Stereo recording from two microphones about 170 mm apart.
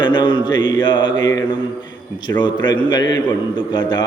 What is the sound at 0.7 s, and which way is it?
Mantra, 25° left (ahead or behind).